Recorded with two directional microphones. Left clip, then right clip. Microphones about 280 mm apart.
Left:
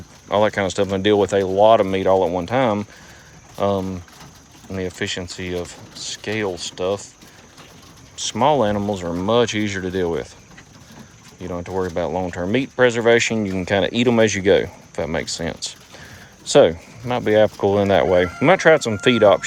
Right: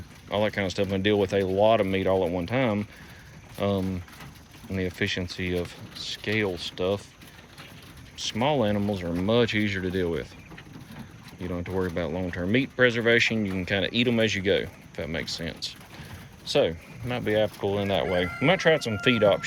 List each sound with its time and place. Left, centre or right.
0.3 s speech: centre
8.3 s speech: centre
11.4 s speech: centre